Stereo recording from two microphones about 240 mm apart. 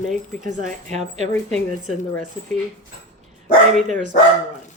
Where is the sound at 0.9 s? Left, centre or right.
Right.